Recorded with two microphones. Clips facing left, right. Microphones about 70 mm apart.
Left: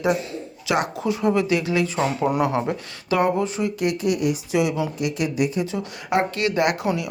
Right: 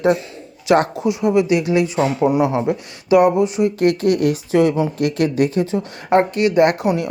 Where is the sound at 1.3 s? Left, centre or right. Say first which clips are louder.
Right 5 dB; right.